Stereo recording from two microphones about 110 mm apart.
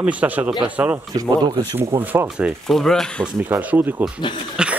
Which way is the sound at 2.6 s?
5° left (ahead or behind).